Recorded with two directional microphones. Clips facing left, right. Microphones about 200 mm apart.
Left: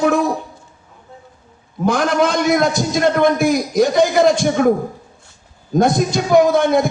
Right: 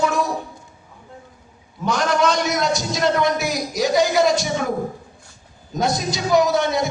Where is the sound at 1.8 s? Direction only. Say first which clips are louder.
Left 3 dB; 55° left (ahead or behind).